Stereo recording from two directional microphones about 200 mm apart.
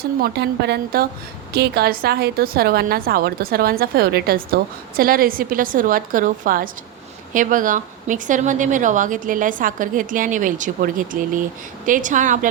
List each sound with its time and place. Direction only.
0.2 s a woman's voice: 55° right (ahead or behind); by 12.5 s 40° right (ahead or behind)